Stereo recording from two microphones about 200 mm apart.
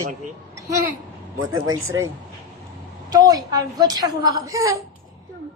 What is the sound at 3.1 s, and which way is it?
A woman's voice, 20° right (ahead or behind).